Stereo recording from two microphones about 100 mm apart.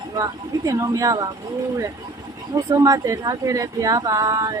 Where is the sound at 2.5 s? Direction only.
35° right (ahead or behind).